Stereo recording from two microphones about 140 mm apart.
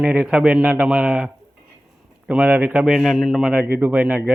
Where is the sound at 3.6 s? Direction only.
15° right (ahead or behind).